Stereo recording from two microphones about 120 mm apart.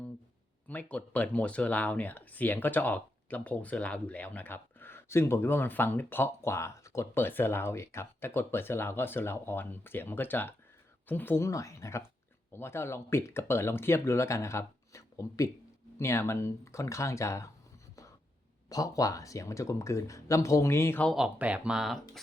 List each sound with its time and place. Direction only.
0.7 s speech: 15° left (ahead or behind)
18.7 s speech: 30° left (ahead or behind)
21.2 s speech: 10° right (ahead or behind)